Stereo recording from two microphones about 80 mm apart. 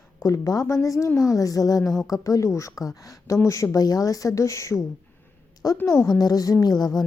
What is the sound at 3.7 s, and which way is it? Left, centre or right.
A woman's voice, left.